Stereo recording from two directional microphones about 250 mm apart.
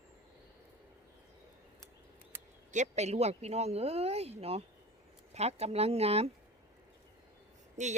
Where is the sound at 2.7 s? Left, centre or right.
Right.